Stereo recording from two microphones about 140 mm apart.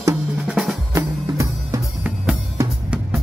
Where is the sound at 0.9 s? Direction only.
20° right (ahead or behind).